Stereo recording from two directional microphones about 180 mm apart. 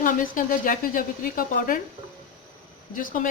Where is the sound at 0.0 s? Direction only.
50° left (ahead or behind).